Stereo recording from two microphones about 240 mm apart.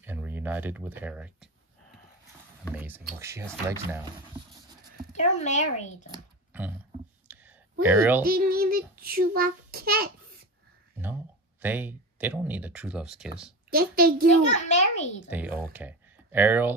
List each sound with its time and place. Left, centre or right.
0.0 s speech: centre
2.7 s speech: centre
5.1 s speech: left
7.3 s a sound: centre
7.8 s speech: centre
8.2 s child singing: right
11.6 s speech: centre
13.7 s child singing: right
14.5 s a child's voice: left
15.2 s speech: centre